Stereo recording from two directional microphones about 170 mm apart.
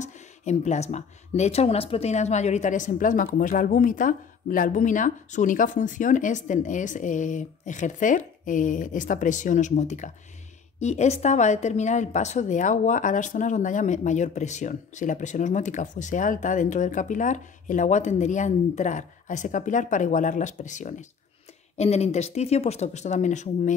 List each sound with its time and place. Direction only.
0.0 s speech: 45° left (ahead or behind)